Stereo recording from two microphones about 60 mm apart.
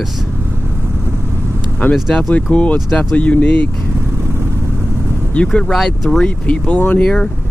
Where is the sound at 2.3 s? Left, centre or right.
Left.